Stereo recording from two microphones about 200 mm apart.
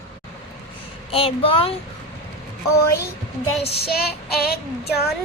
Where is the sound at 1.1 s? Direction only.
25° left (ahead or behind).